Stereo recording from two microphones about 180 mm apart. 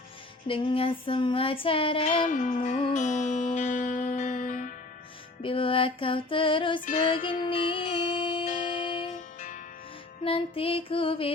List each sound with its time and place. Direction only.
0.4 s child singing: 30° left (ahead or behind)
2.2 s music: 45° left (ahead or behind)
5.4 s child singing: 30° left (ahead or behind)
7.5 s music: 30° left (ahead or behind)
8.4 s music: 45° left (ahead or behind)
10.2 s music: 30° left (ahead or behind)